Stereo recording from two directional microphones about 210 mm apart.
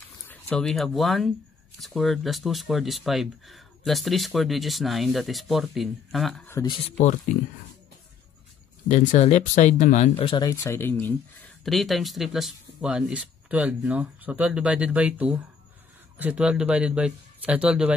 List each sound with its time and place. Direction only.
0.3 s speech: 5° left (ahead or behind)
6.5 s speech: 20° left (ahead or behind)
8.8 s speech: 35° left (ahead or behind); by 17.9 s 5° right (ahead or behind)